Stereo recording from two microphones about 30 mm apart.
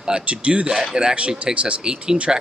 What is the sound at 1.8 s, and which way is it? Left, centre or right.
Speech, right.